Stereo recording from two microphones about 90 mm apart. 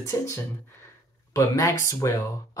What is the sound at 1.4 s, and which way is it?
Speech, 35° left (ahead or behind).